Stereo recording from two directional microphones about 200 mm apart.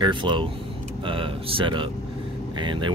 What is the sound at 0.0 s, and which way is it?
Speech, 25° right (ahead or behind).